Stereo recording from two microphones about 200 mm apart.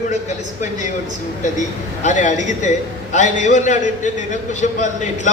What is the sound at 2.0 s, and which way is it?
A man's voice, 40° left (ahead or behind).